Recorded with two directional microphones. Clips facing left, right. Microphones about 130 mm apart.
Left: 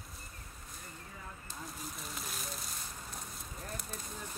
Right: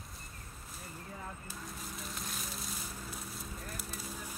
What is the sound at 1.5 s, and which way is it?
Fire, centre (ahead or behind).